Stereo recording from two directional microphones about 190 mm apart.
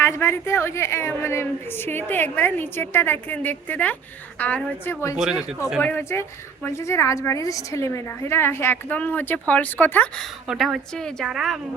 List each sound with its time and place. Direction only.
0.0 s a woman's voice: 15° left (ahead or behind)
5.1 s a woman's voice: 5° right (ahead or behind)
5.8 s a woman's voice: 10° left (ahead or behind)
10.4 s a woman's voice: centre (ahead or behind)